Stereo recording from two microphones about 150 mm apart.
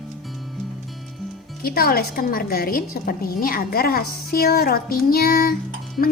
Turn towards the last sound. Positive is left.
turn(degrees=75)  # may be behind; listen again after turning